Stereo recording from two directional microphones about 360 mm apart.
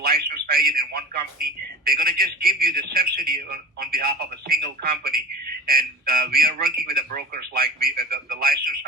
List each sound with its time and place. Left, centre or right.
0.0 s a man's voice: right